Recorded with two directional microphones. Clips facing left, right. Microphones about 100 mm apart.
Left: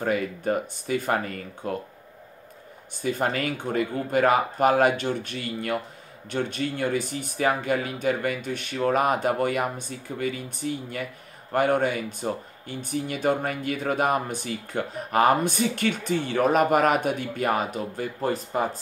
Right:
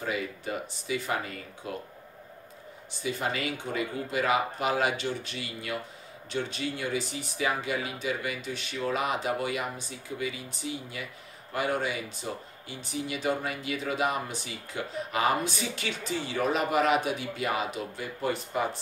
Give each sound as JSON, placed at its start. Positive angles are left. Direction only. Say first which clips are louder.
{"t": 0.0, "sound": "speech", "louder": "left 7 dB", "side_deg": 50}
{"t": 3.0, "sound": "speech", "louder": "left 5 dB", "side_deg": 50}